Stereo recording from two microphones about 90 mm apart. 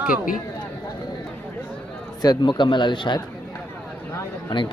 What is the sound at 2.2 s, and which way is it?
Speech, 55° left (ahead or behind).